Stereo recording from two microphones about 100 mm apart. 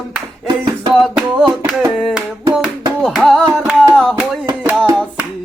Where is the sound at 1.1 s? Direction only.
10° right (ahead or behind).